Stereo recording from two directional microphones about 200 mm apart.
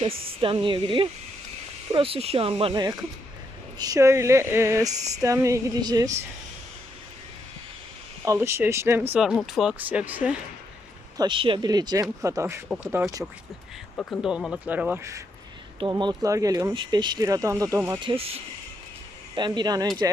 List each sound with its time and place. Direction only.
0.4 s speech: 25° right (ahead or behind)
8.2 s speech: 15° right (ahead or behind)
11.2 s speech: 25° right (ahead or behind)
13.9 s speech: 5° left (ahead or behind); by 15.2 s 10° right (ahead or behind)
15.8 s speech: 20° right (ahead or behind)
18.0 s speech: 30° right (ahead or behind)